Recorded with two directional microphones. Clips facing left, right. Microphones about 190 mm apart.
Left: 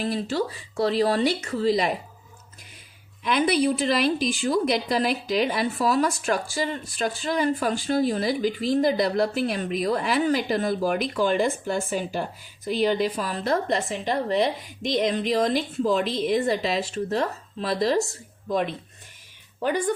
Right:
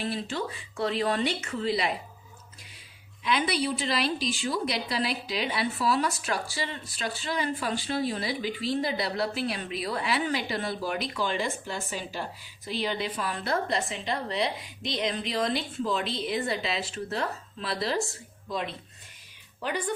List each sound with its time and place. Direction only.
0.0 s speech: 35° left (ahead or behind)
3.2 s a woman's voice: 50° left (ahead or behind)